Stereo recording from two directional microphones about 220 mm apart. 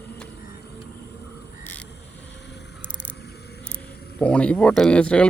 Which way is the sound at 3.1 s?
50° left (ahead or behind).